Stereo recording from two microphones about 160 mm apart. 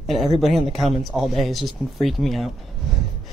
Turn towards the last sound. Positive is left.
turn(degrees=0)  # may be behind; listen again after turning